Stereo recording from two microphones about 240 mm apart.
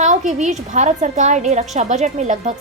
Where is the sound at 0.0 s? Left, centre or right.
Right.